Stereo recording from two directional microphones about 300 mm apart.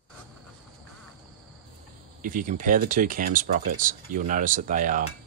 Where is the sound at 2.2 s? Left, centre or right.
Right.